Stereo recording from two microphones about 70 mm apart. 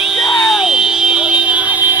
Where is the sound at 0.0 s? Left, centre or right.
Centre.